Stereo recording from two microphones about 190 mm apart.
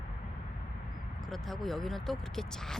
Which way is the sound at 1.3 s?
Centre (ahead or behind).